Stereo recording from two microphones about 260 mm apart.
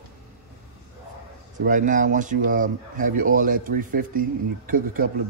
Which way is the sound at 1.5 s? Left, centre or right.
Right.